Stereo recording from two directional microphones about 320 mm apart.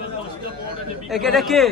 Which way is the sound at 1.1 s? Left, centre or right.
Centre.